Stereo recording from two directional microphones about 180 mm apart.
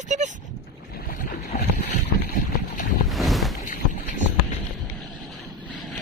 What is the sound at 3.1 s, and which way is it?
Boat, centre (ahead or behind).